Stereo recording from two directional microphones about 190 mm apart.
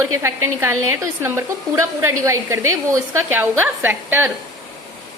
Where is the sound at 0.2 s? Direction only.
15° right (ahead or behind).